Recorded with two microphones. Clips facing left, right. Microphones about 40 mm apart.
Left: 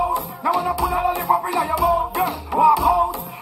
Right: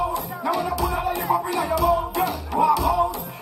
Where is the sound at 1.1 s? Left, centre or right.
Left.